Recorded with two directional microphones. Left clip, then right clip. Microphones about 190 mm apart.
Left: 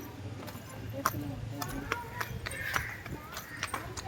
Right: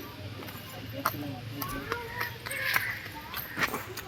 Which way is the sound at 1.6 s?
5° right (ahead or behind).